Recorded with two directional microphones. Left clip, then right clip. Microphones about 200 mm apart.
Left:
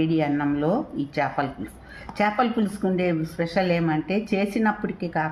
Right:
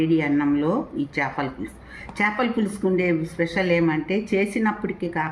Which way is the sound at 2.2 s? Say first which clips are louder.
Even; 50° left (ahead or behind).